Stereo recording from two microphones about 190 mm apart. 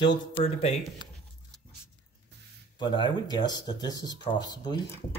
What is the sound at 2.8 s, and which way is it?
Speech, 25° left (ahead or behind).